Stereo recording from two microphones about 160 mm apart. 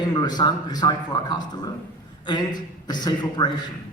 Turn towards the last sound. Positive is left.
turn(degrees=25)  # may be behind; listen again after turning